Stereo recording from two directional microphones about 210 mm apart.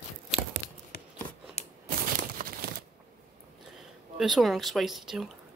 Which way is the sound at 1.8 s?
45° right (ahead or behind).